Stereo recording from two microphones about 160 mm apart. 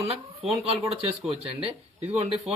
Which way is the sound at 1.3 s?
35° right (ahead or behind).